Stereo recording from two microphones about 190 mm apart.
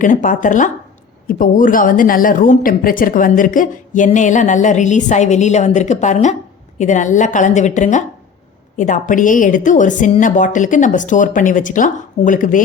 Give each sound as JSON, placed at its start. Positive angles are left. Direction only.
{"t": 0.0, "sound": "a woman's voice", "side_deg": 45}